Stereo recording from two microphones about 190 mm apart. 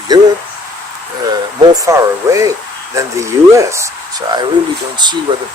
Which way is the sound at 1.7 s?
15° right (ahead or behind).